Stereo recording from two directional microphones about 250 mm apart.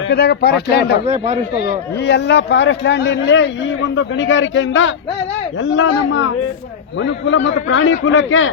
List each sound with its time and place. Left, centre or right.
0.1 s speech: left
1.0 s speech: right
1.5 s speech: left